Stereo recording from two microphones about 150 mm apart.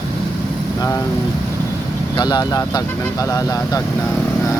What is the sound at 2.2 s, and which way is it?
Speech, 25° left (ahead or behind).